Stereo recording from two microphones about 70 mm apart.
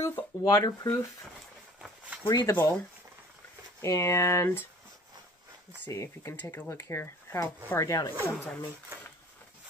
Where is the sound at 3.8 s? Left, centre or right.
Left.